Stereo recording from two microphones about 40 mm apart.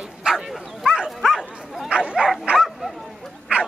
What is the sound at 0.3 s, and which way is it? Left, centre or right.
Bow-wow, centre.